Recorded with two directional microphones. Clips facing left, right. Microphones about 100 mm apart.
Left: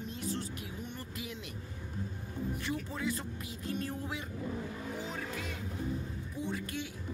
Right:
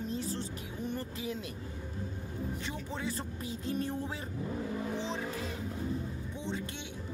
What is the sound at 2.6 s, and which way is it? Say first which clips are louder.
Speech: left 2 dB; 30° right (ahead or behind).